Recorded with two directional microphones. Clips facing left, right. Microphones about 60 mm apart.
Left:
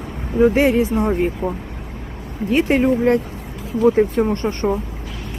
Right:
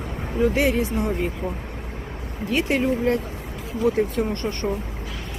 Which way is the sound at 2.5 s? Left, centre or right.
Left.